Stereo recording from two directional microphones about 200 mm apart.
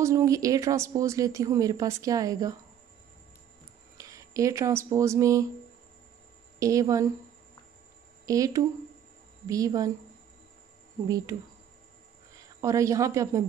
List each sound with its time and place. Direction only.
0.0 s speech: 15° right (ahead or behind)
4.0 s speech: 15° right (ahead or behind)
6.6 s speech: 15° right (ahead or behind)
8.3 s speech: 15° right (ahead or behind)
11.1 s speech: 15° right (ahead or behind)
12.4 s speech: 15° right (ahead or behind)